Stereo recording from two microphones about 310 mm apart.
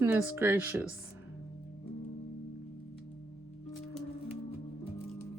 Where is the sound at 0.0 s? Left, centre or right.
Centre.